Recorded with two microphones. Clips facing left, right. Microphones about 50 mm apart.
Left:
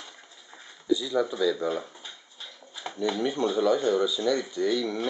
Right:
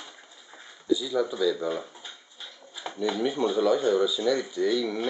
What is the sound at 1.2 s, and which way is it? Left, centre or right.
Speech, centre.